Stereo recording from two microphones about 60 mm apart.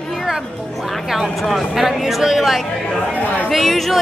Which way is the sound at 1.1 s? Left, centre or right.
Centre.